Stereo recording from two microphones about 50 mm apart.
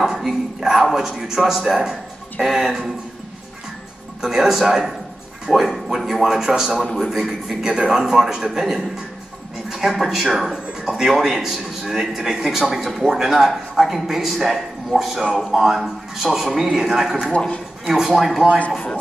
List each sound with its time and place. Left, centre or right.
0.0 s speech: centre
4.2 s a man's voice: centre
17.3 s speech: centre
17.8 s speech: centre